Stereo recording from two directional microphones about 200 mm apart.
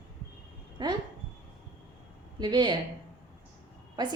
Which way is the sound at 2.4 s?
20° right (ahead or behind).